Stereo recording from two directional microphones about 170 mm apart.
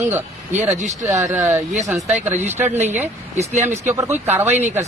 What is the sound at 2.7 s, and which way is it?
Speech, 40° right (ahead or behind).